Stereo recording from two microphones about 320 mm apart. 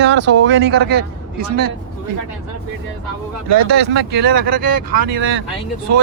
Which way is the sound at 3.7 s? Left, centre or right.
Right.